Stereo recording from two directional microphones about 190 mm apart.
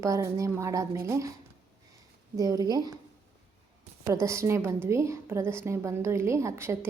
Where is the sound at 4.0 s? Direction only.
15° right (ahead or behind).